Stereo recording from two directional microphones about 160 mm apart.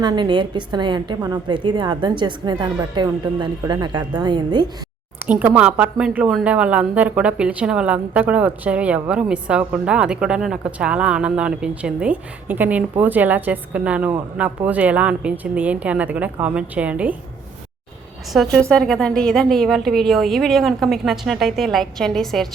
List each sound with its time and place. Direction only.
0.0 s a woman's voice: 30° right (ahead or behind)
5.2 s speech: 10° right (ahead or behind)
18.3 s a woman's voice: centre (ahead or behind)